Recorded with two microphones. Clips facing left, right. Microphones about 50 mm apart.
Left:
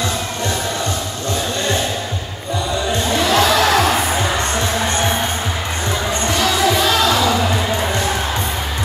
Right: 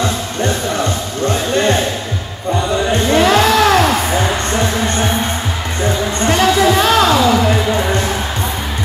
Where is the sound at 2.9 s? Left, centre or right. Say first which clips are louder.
Right 6 dB; right.